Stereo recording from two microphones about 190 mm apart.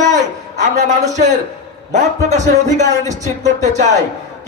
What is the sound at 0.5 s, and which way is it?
A man's voice, 40° right (ahead or behind).